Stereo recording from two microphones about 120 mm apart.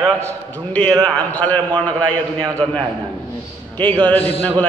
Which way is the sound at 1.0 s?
15° left (ahead or behind).